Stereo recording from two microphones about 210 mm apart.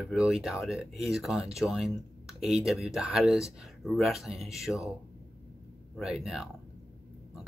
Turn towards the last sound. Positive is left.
turn(degrees=0)  # may be behind; listen again after turning